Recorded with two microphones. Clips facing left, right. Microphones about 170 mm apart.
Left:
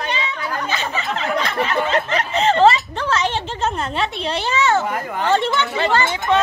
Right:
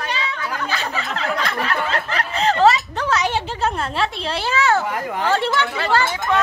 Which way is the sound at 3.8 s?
Centre (ahead or behind).